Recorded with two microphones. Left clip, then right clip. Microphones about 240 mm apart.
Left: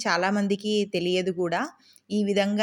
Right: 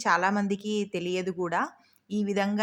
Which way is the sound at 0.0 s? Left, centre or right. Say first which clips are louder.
Even; centre.